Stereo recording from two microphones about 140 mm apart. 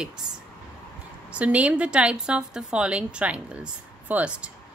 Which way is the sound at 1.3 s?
10° right (ahead or behind).